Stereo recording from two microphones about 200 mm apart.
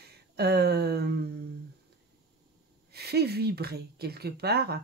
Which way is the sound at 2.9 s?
55° right (ahead or behind).